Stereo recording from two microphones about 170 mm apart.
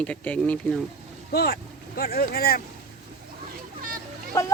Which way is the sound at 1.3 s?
70° left (ahead or behind).